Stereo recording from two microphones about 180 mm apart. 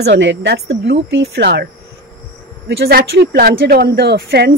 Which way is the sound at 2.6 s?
65° right (ahead or behind).